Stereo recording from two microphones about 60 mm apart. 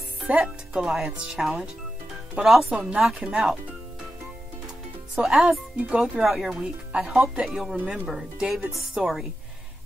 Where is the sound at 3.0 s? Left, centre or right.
Centre.